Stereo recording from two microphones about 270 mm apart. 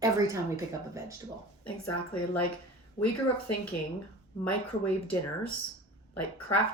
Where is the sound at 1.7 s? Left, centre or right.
Left.